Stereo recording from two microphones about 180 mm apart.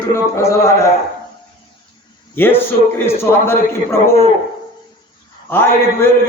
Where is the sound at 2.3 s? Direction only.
10° left (ahead or behind).